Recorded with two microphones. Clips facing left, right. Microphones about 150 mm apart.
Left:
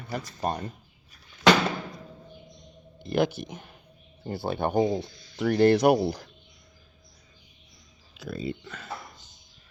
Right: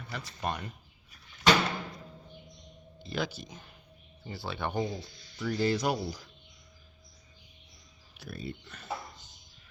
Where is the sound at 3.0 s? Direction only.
55° left (ahead or behind).